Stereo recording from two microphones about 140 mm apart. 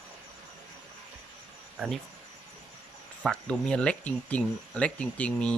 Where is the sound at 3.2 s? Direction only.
5° left (ahead or behind).